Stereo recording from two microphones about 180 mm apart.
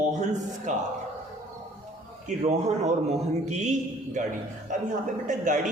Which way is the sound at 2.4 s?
40° right (ahead or behind).